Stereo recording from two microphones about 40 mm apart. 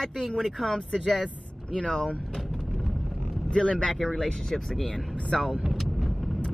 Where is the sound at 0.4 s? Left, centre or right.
Centre.